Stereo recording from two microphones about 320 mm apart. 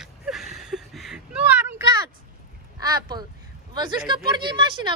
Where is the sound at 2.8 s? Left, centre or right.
Centre.